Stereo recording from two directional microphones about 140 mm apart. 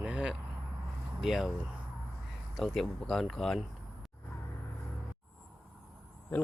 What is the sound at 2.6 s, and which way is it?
Speech, centre (ahead or behind).